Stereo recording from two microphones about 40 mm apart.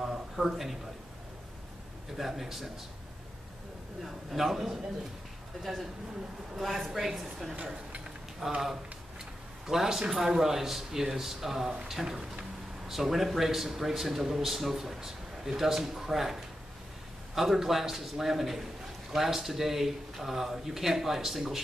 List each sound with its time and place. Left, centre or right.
0.0 s a sound: centre
2.1 s a man's voice: centre
4.0 s a man's voice: centre
7.5 s speech: right
8.4 s a man's voice: centre
9.7 s speech: centre